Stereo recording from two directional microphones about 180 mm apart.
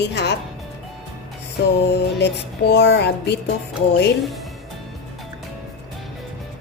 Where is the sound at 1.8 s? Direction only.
70° left (ahead or behind).